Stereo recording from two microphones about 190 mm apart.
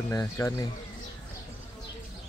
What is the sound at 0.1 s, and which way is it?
Speech, 15° left (ahead or behind).